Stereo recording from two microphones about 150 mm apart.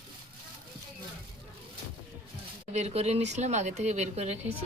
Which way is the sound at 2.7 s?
45° right (ahead or behind).